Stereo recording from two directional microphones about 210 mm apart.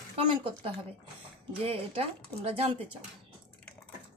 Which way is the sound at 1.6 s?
25° right (ahead or behind).